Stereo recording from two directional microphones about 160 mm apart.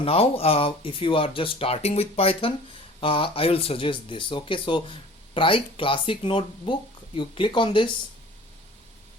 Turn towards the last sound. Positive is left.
turn(degrees=30)  # may be behind; listen again after turning